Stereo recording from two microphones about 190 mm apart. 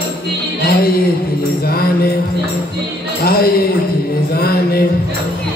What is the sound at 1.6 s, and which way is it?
Music, 50° left (ahead or behind).